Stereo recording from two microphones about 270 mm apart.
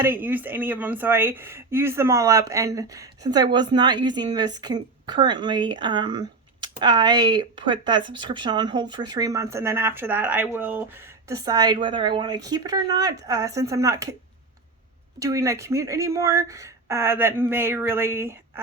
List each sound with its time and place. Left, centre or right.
0.0 s speech: centre
15.2 s speech: centre